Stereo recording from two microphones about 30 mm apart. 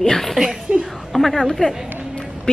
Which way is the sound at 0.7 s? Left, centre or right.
Right.